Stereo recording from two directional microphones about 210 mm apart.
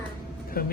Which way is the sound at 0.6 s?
45° left (ahead or behind).